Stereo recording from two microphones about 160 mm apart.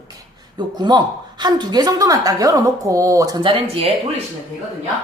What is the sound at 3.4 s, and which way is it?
Speech, 35° right (ahead or behind).